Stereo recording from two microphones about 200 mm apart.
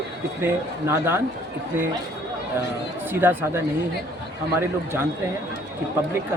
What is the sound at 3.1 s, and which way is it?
Speech, 10° right (ahead or behind).